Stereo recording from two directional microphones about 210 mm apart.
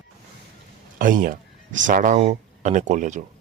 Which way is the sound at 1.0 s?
40° right (ahead or behind).